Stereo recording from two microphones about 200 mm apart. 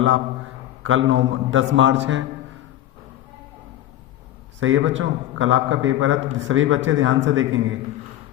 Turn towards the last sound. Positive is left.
turn(degrees=-70)  # may be behind; listen again after turning